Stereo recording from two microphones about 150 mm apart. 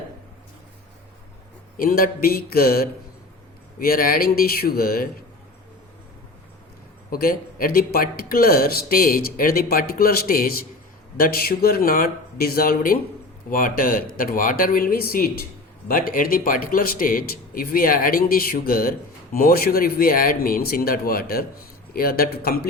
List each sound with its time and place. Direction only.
1.7 s a man's voice: 70° left (ahead or behind)
7.1 s a man's voice: 75° left (ahead or behind)
15.9 s a man's voice: 70° left (ahead or behind); by 22.7 s 90° left